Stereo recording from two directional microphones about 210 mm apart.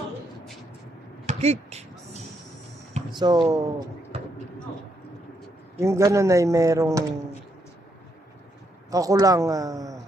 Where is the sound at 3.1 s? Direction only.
20° right (ahead or behind).